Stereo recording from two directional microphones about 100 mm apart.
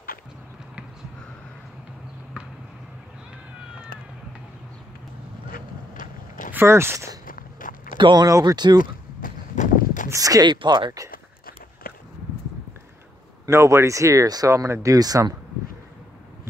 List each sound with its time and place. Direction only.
6.5 s speech: 25° right (ahead or behind)
8.0 s speech: 45° right (ahead or behind)
10.0 s speech: 35° right (ahead or behind); by 10.9 s 50° right (ahead or behind)
13.5 s speech: 30° right (ahead or behind)